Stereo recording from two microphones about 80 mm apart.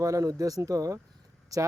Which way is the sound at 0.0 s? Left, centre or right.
Right.